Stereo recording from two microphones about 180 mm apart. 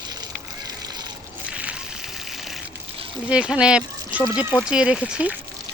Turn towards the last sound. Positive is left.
turn(degrees=-5)  # may be behind; listen again after turning